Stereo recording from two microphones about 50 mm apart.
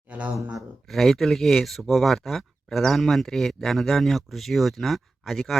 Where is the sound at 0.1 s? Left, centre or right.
Right.